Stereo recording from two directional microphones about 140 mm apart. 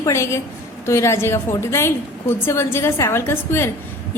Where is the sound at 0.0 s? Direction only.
20° left (ahead or behind).